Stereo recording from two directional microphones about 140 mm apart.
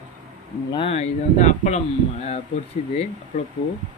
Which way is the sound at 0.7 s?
40° left (ahead or behind).